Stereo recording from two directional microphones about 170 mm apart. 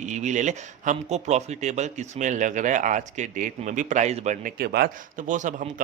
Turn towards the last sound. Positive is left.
turn(degrees=-50)  # may be behind; listen again after turning